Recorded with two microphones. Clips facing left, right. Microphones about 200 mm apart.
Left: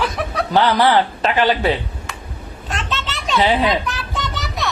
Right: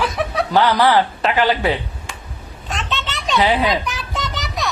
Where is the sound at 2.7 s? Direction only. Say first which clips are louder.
Even; centre (ahead or behind).